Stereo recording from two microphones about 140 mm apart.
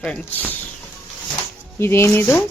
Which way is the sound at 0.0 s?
10° left (ahead or behind).